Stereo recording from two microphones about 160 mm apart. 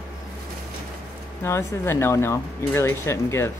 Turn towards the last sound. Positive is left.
turn(degrees=15)  # may be behind; listen again after turning